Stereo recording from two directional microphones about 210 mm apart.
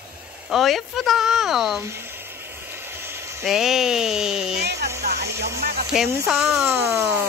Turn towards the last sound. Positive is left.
turn(degrees=-10)  # may be behind; listen again after turning